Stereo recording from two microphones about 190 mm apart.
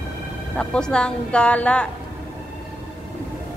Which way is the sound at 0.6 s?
5° left (ahead or behind).